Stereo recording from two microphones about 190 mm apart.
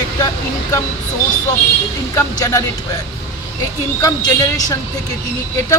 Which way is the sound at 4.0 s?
20° left (ahead or behind).